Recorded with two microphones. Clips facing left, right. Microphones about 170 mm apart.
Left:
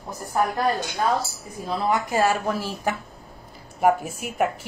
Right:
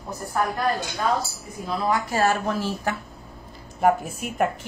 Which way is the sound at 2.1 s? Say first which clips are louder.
Even; 10° left (ahead or behind).